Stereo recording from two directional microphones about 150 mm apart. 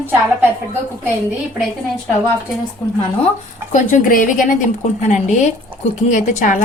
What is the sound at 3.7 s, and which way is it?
Speech, 60° left (ahead or behind).